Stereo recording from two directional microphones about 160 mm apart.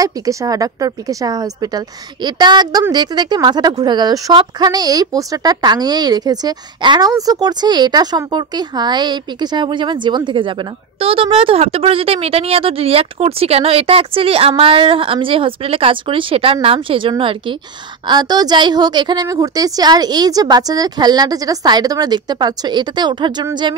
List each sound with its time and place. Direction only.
0.0 s speech: 20° right (ahead or behind)